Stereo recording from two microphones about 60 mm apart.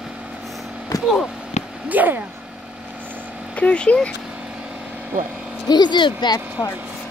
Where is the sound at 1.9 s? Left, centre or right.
Right.